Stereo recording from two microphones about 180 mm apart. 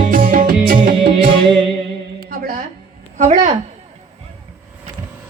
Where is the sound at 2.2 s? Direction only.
55° right (ahead or behind).